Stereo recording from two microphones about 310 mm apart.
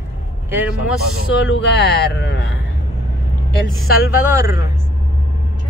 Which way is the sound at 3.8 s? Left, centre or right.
Centre.